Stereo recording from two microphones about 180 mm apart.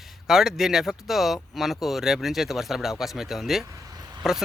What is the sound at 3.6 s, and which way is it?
Vehicle, 20° right (ahead or behind).